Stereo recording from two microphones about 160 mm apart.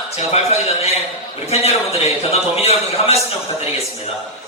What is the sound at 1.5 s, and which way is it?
Speech, 40° left (ahead or behind).